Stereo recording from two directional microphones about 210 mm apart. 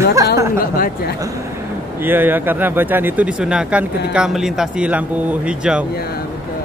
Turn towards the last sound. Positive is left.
turn(degrees=-5)  # may be behind; listen again after turning